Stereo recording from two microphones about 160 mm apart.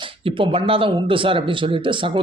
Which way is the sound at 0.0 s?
35° right (ahead or behind).